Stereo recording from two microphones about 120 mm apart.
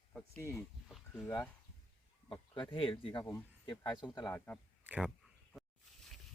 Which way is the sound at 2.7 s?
45° left (ahead or behind).